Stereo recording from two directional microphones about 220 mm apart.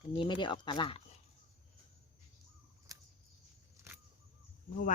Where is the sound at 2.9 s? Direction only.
15° right (ahead or behind).